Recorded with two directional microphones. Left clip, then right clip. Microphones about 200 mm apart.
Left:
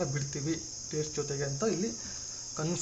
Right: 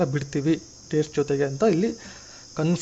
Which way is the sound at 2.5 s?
40° right (ahead or behind).